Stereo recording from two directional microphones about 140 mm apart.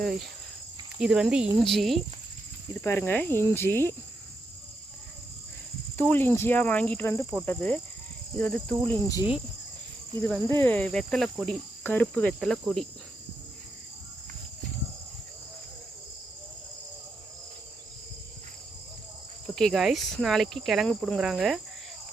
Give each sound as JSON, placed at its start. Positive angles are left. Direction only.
{"t": 0.0, "sound": "cricket", "side_deg": 0}
{"t": 2.8, "sound": "speech", "side_deg": 15}
{"t": 6.0, "sound": "speech", "side_deg": 15}
{"t": 10.2, "sound": "cricket", "side_deg": 0}
{"t": 10.5, "sound": "speech", "side_deg": 15}
{"t": 11.8, "sound": "speech", "side_deg": 10}
{"t": 19.5, "sound": "cricket", "side_deg": 0}